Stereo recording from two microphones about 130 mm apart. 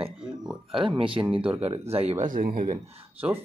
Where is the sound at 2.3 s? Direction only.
90° right.